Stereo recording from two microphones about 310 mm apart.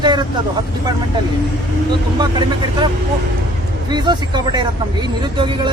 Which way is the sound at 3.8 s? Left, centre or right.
Centre.